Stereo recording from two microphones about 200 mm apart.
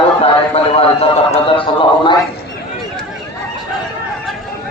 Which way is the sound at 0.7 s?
30° left (ahead or behind).